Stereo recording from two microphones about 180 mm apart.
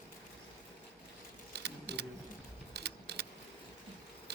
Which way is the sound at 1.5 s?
70° right (ahead or behind).